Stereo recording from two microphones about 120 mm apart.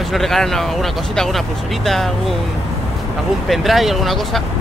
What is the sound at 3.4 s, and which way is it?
Speech, centre (ahead or behind).